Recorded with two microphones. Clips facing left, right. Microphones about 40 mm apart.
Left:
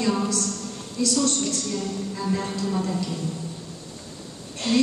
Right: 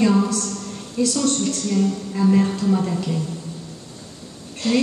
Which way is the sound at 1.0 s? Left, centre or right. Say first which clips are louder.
Right 3 dB; right.